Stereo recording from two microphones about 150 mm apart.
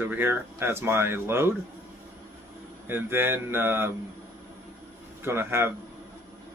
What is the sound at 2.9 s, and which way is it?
Speech, 15° right (ahead or behind).